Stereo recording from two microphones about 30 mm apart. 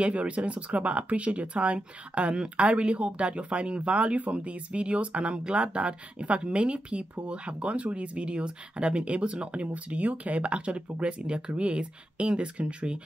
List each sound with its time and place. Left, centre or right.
0.0 s speech: right